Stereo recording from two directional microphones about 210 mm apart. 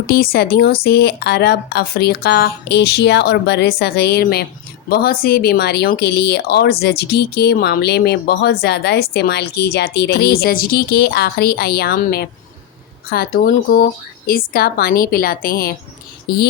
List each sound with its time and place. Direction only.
0.1 s speech: 45° left (ahead or behind)